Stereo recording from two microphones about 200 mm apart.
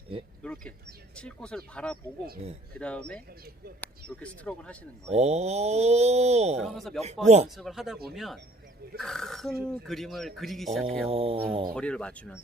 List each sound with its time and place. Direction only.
0.4 s a sound: 5° left (ahead or behind)
1.1 s speech: 5° left (ahead or behind)
5.0 s speech: 35° right (ahead or behind)
6.6 s speech: centre (ahead or behind)
7.3 s speech: 35° right (ahead or behind)
7.5 s speech: centre (ahead or behind)
11.1 s speech: 30° right (ahead or behind)
11.7 s speech: 5° left (ahead or behind)